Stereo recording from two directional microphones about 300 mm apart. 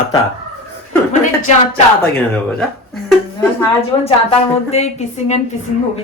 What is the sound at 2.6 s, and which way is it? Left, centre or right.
Speech, centre.